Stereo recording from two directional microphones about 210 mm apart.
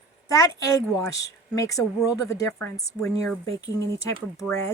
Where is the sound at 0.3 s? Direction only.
15° left (ahead or behind).